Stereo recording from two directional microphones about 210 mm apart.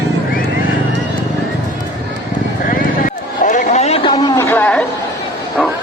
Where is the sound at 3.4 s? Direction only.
35° left (ahead or behind); by 4.8 s 10° left (ahead or behind).